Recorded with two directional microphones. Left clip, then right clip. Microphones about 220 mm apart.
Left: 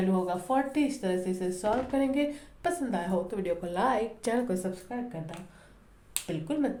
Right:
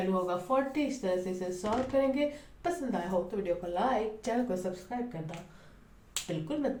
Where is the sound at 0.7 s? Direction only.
45° left (ahead or behind).